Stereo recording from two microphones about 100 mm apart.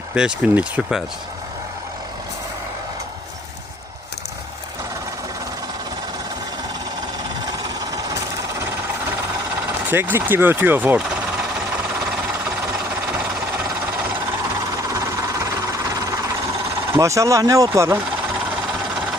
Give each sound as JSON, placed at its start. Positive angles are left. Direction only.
{"t": 0.1, "sound": "speech", "side_deg": -10}
{"t": 7.9, "sound": "sewing machine", "side_deg": -35}
{"t": 9.9, "sound": "speech", "side_deg": -20}
{"t": 14.9, "sound": "a sound", "side_deg": -35}
{"t": 16.9, "sound": "speech", "side_deg": -30}